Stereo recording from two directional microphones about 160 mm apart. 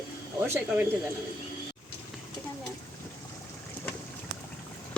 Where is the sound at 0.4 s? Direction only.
15° right (ahead or behind).